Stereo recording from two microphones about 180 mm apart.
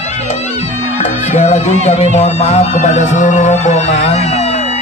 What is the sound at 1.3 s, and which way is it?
Speech, 40° left (ahead or behind).